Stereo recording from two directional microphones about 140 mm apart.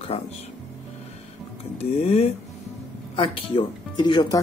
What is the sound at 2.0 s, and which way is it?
Speech, 50° left (ahead or behind).